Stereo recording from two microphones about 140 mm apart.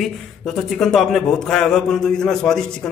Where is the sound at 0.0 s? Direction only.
Centre (ahead or behind).